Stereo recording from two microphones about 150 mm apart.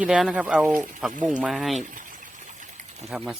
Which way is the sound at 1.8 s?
65° right (ahead or behind).